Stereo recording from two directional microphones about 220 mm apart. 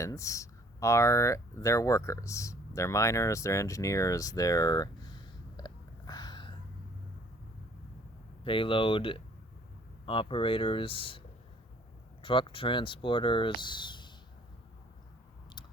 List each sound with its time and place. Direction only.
0.0 s speech: 15° left (ahead or behind)
5.5 s a sound: 20° left (ahead or behind)
8.4 s speech: 25° left (ahead or behind)
12.2 s speech: 25° left (ahead or behind)